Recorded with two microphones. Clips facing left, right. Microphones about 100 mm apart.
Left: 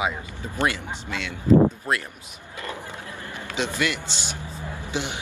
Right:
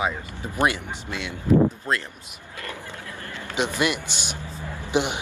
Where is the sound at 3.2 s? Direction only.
15° left (ahead or behind).